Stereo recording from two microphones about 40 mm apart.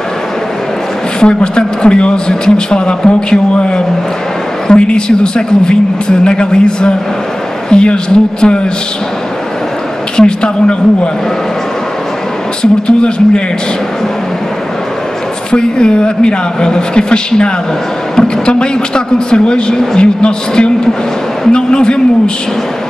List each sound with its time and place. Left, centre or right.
1.2 s a woman's voice: left
10.1 s a woman's voice: left
12.8 s a woman's voice: left
15.5 s a woman's voice: left